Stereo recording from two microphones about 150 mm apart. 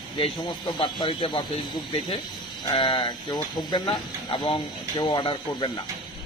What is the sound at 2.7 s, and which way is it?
Speech, 30° left (ahead or behind).